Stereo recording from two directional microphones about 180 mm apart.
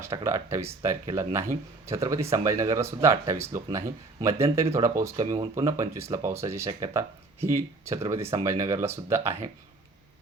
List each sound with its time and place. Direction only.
0.0 s speech: 15° right (ahead or behind)